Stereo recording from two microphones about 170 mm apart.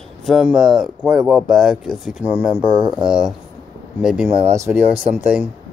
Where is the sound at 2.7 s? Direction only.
30° right (ahead or behind).